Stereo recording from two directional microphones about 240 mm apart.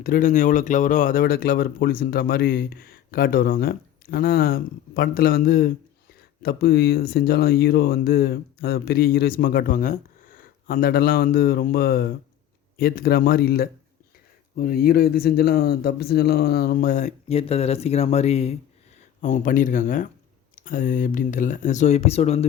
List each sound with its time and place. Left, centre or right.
0.0 s speech: left